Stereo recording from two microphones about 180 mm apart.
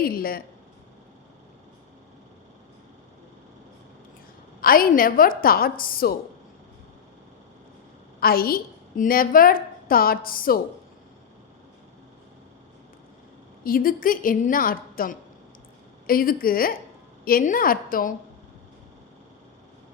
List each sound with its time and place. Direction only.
0.0 s speech: 55° left (ahead or behind)
4.6 s a woman's voice: 55° left (ahead or behind)
8.2 s a woman's voice: 55° left (ahead or behind)
13.7 s a woman's voice: 50° left (ahead or behind)